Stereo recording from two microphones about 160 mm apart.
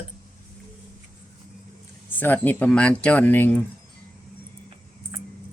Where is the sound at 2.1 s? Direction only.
10° left (ahead or behind).